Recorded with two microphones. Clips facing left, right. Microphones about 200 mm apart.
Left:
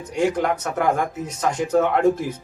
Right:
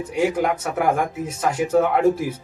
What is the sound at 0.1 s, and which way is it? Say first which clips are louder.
Speech: even; 5° right (ahead or behind).